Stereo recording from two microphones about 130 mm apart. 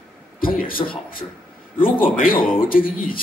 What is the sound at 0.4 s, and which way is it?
Speech, 90° left.